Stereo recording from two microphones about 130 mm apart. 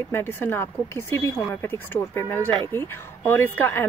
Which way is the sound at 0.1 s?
15° left (ahead or behind).